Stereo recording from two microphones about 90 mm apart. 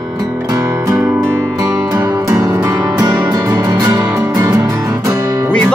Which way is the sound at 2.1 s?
40° right (ahead or behind).